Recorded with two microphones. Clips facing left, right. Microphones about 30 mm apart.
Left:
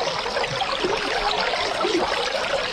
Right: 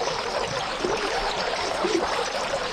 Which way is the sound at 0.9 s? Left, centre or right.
Left.